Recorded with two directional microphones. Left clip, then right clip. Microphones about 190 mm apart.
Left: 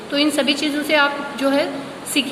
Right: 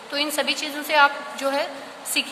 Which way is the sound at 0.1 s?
25° right (ahead or behind).